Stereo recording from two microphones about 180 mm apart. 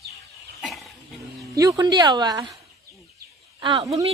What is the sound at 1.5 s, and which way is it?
Speech, 20° right (ahead or behind).